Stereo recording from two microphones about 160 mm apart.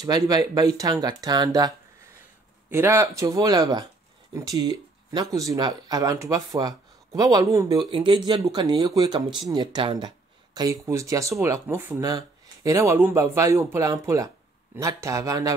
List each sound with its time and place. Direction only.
0.0 s speech: 25° right (ahead or behind)
2.7 s speech: 15° right (ahead or behind)